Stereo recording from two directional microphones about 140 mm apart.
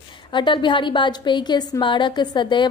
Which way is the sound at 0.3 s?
35° left (ahead or behind).